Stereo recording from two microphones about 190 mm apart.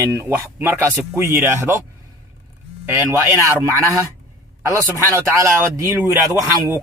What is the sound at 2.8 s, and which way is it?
A man's voice, 10° right (ahead or behind).